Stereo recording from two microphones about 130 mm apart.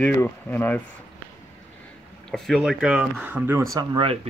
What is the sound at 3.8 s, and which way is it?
Speech, 30° right (ahead or behind).